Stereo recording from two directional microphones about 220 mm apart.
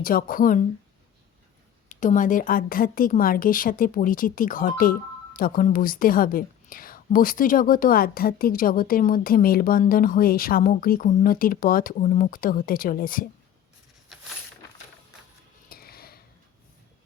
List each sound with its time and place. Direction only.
0.0 s a woman's voice: 40° left (ahead or behind)
1.9 s a woman's voice: 35° left (ahead or behind)
15.7 s a sound: 45° left (ahead or behind)